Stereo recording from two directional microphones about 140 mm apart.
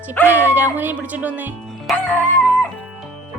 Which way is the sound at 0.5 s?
15° right (ahead or behind).